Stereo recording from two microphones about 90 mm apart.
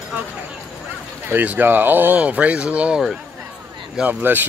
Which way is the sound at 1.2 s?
20° right (ahead or behind).